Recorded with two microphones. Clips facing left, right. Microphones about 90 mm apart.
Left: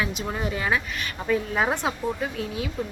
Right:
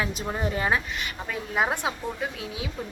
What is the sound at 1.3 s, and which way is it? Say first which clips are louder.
Speech: left 3 dB; 10° right (ahead or behind).